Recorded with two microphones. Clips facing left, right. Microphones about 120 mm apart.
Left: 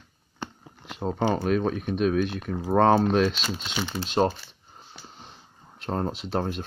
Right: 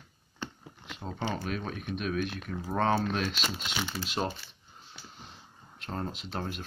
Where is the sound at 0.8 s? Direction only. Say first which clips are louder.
Left 10 dB; 45° left (ahead or behind).